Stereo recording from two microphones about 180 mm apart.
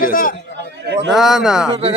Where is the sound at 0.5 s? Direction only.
70° right (ahead or behind).